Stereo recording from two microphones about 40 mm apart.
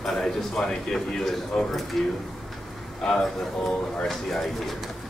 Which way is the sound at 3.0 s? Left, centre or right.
Centre.